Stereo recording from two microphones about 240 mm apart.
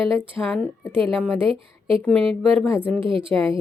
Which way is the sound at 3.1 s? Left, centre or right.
Right.